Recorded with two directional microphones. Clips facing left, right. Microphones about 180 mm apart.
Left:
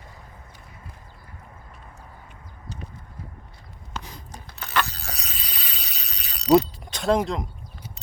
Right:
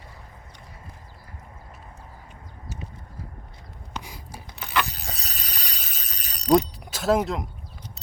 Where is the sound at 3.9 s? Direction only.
10° right (ahead or behind).